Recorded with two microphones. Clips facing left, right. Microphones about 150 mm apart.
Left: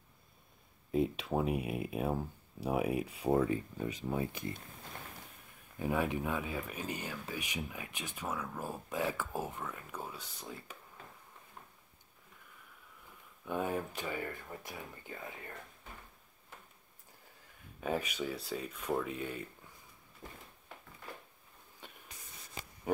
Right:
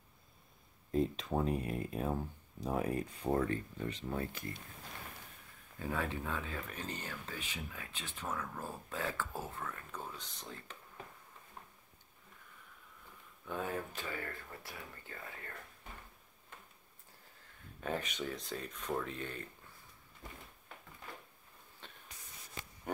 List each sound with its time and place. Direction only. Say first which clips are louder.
0.9 s speech: left 1 dB; 10° left (ahead or behind)
5.8 s speech: left 5 dB; 15° left (ahead or behind)
13.5 s speech: left 4 dB; 15° left (ahead or behind)
17.7 s speech: left 3 dB; 10° left (ahead or behind)
20.2 s a sound: left 1 dB; 25° left (ahead or behind)
21.8 s spray: left 2 dB; 10° left (ahead or behind)
22.9 s a sound: left 7 dB; 5° left (ahead or behind)